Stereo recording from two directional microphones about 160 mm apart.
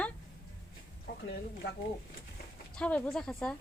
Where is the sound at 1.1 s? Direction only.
80° left.